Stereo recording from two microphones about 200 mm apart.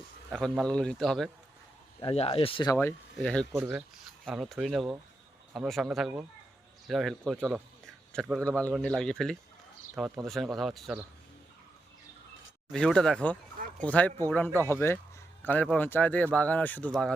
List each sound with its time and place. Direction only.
0.3 s a man's voice: 5° left (ahead or behind)
2.0 s speech: 30° left (ahead or behind)
2.7 s a man's voice: 10° left (ahead or behind)
7.3 s speech: 10° right (ahead or behind)
8.1 s a man's voice: 5° left (ahead or behind)
12.7 s a man's voice: 5° left (ahead or behind)